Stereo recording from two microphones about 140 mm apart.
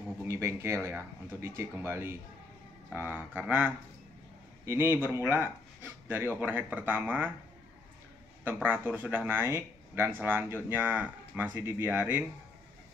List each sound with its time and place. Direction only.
0.3 s speech: 20° right (ahead or behind)
8.6 s speech: 15° right (ahead or behind)